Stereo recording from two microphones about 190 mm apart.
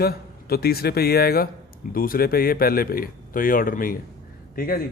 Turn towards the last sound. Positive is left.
turn(degrees=50)  # may be behind; listen again after turning